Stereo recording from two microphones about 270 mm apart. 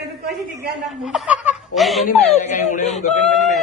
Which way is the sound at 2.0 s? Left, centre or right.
Left.